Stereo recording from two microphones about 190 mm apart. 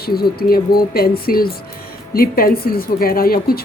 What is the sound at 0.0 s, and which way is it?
Speech, 55° left (ahead or behind).